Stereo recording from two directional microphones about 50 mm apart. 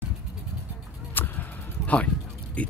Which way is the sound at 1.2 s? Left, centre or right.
Left.